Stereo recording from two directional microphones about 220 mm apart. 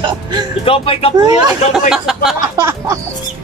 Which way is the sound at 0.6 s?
25° left (ahead or behind).